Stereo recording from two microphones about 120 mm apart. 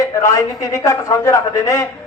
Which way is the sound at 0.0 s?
25° left (ahead or behind).